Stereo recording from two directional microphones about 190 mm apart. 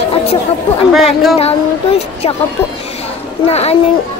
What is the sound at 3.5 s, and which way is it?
Speech, 35° left (ahead or behind).